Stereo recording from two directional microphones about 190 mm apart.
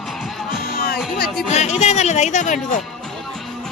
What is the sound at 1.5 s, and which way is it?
Speech, 35° left (ahead or behind).